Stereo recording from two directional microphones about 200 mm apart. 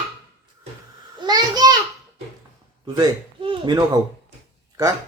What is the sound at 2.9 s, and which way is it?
Speech, 25° right (ahead or behind).